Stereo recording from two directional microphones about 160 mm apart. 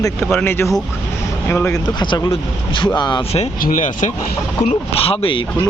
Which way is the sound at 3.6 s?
55° left (ahead or behind).